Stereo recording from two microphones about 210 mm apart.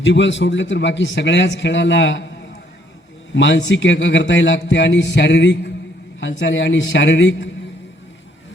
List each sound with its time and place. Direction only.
0.0 s speech: 60° left (ahead or behind)
3.3 s speech: 60° left (ahead or behind)